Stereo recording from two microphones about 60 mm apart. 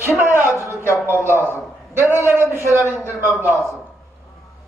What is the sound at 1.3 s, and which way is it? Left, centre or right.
Speech, left.